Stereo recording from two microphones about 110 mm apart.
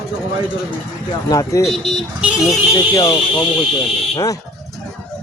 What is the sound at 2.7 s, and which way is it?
Speech, 40° left (ahead or behind).